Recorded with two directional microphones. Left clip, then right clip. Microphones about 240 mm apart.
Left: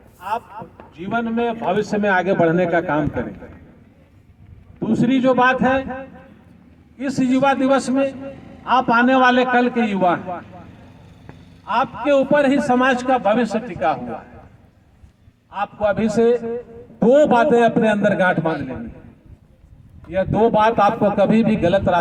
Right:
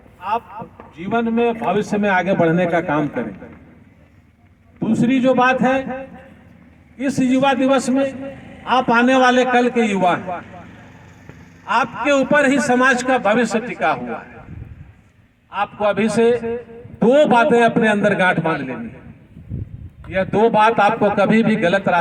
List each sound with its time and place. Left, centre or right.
0.3 s a man's voice: right
4.8 s a man's voice: right
11.6 s a man's voice: right
15.5 s a man's voice: right
20.1 s a man's voice: right